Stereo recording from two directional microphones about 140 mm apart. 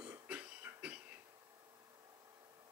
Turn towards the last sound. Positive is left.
turn(degrees=-10)  # may be behind; listen again after turning